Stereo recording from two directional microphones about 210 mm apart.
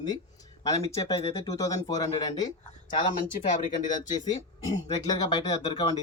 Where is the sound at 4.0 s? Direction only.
20° left (ahead or behind).